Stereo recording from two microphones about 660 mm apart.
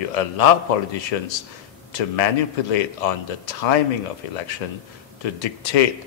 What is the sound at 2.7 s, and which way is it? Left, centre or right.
Speech, left.